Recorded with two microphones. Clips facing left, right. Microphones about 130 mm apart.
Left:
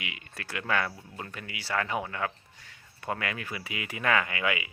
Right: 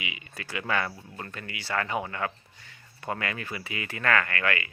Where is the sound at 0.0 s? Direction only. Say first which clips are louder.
Right 2 dB; centre (ahead or behind).